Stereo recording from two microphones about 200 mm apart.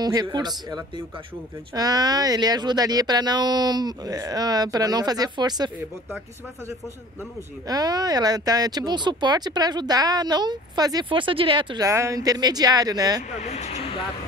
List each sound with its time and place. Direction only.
0.0 s speech: 20° right (ahead or behind)
7.6 s speech: 20° right (ahead or behind)
13.3 s speech: 35° left (ahead or behind)